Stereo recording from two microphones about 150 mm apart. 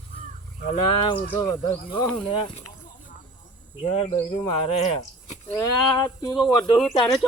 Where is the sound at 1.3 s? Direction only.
30° left (ahead or behind).